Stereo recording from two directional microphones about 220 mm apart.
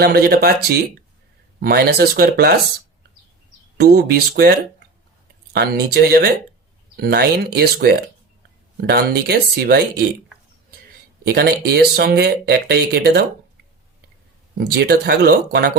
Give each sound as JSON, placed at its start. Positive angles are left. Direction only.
{"t": 0.0, "sound": "speech", "side_deg": -45}
{"t": 3.8, "sound": "speech", "side_deg": -45}
{"t": 11.3, "sound": "speech", "side_deg": -45}
{"t": 14.6, "sound": "speech", "side_deg": -45}